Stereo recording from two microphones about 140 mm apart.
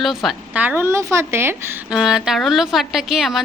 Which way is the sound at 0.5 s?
10° right (ahead or behind).